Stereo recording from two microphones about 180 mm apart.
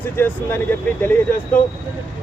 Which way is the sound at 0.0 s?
10° left (ahead or behind).